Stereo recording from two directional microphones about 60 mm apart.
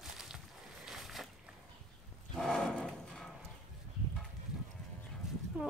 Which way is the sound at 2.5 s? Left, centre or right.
Centre.